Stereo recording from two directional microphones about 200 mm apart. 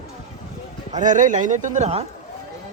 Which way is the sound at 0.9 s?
40° right (ahead or behind).